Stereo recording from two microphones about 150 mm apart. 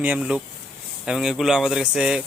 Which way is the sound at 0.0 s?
10° right (ahead or behind).